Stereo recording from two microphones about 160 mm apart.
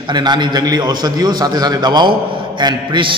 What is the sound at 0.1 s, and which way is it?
A man's voice, 25° right (ahead or behind).